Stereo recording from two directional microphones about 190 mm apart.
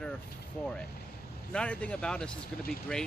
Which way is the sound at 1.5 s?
5° left (ahead or behind).